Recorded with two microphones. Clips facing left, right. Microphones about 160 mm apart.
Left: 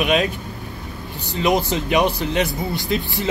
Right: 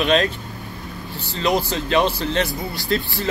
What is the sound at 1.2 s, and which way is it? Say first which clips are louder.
Speech: left 2 dB; 20° left (ahead or behind).